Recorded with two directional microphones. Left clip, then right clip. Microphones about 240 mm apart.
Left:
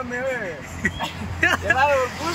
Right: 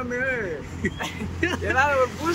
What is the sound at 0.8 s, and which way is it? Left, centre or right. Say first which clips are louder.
Speech: left 4 dB; centre.